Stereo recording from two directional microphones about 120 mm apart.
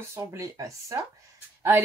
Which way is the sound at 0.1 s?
25° right (ahead or behind).